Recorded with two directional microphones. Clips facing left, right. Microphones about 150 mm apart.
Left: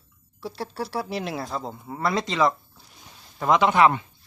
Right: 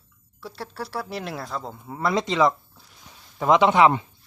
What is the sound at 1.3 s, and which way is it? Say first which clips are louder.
Speech: left 2 dB; 10° left (ahead or behind).